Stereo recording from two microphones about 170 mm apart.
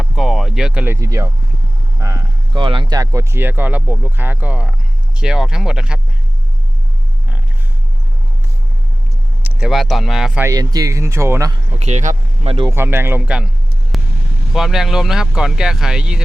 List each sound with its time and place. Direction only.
0.0 s a sound: centre (ahead or behind)
0.9 s speech: 20° right (ahead or behind)
2.0 s a sound: 20° right (ahead or behind)
2.6 s speech: 25° right (ahead or behind); by 6.0 s 5° right (ahead or behind)
9.4 s speech: 5° right (ahead or behind)
10.4 s speech: 20° right (ahead or behind)
11.8 s speech: 40° right (ahead or behind)
12.7 s speech: 15° right (ahead or behind)
13.9 s vehicle: centre (ahead or behind)
14.5 s speech: centre (ahead or behind)